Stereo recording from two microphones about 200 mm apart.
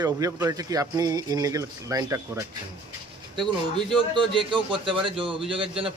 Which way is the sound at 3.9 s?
25° right (ahead or behind).